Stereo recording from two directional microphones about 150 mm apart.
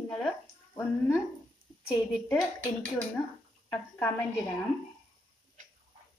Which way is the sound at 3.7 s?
15° left (ahead or behind).